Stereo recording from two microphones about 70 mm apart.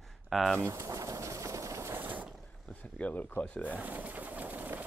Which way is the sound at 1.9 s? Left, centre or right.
Right.